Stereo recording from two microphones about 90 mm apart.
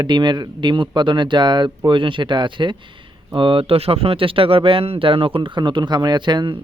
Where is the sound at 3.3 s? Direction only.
90° right.